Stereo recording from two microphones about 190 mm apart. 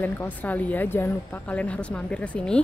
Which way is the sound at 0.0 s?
10° left (ahead or behind).